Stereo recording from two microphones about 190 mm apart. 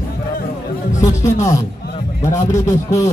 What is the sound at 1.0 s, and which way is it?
A man's voice, 15° left (ahead or behind).